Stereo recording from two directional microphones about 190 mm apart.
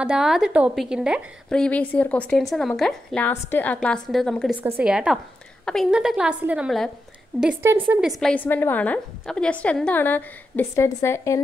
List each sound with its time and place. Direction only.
0.0 s a woman's voice: 5° right (ahead or behind)
8.2 s a woman's voice: 5° left (ahead or behind)